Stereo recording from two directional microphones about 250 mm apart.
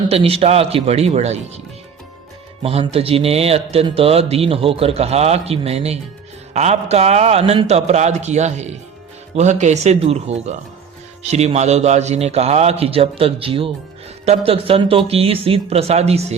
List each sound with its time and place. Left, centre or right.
0.1 s speech: right
2.6 s speech: right